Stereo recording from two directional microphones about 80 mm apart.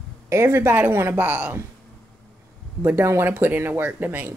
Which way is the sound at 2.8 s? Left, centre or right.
Right.